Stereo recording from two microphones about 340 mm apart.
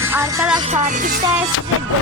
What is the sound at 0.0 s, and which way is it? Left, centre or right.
Music, centre.